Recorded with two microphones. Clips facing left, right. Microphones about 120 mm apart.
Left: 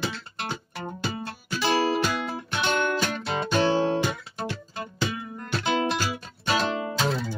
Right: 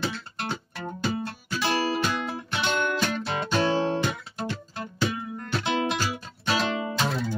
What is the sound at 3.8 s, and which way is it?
Guitar, 5° left (ahead or behind).